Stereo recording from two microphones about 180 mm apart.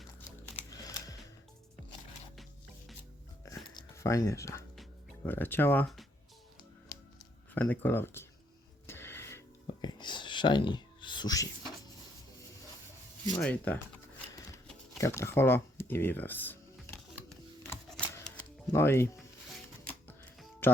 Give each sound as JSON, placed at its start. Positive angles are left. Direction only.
{"t": 0.7, "sound": "a sound", "side_deg": 20}
{"t": 2.3, "sound": "music", "side_deg": 0}
{"t": 3.4, "sound": "a sound", "side_deg": 15}
{"t": 5.2, "sound": "speech", "side_deg": 10}
{"t": 7.5, "sound": "speech", "side_deg": 10}
{"t": 8.9, "sound": "music", "side_deg": 15}
{"t": 9.6, "sound": "whispering", "side_deg": 25}
{"t": 13.4, "sound": "speech", "side_deg": 10}
{"t": 14.9, "sound": "music", "side_deg": 15}